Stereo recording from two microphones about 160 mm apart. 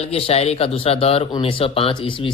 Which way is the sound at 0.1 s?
40° left (ahead or behind).